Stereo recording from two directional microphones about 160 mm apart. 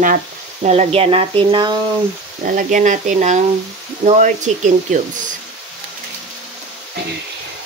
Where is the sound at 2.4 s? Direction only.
55° right (ahead or behind).